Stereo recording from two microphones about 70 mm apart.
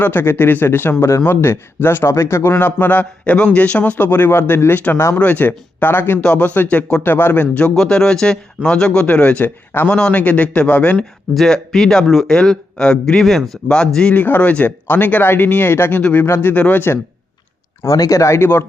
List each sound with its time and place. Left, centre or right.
0.0 s speech: left
7.8 s speech: centre
11.3 s speech: centre
14.1 s speech: left
16.0 s speech: left
16.2 s speech: left
17.8 s speech: left